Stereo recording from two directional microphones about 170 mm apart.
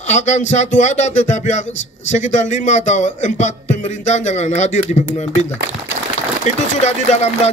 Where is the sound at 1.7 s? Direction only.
90° left.